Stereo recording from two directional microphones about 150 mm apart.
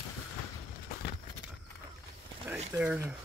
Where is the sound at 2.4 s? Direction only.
10° right (ahead or behind).